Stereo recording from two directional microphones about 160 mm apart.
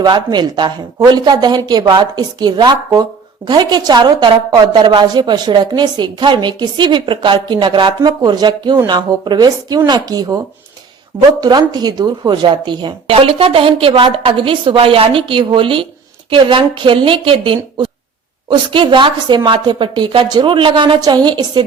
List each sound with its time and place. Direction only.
0.0 s a woman's voice: 25° right (ahead or behind)